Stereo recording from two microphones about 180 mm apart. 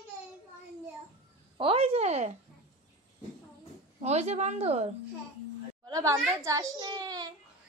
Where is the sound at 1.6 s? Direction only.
30° right (ahead or behind).